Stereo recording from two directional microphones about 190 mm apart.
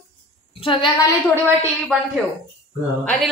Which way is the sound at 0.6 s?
25° left (ahead or behind).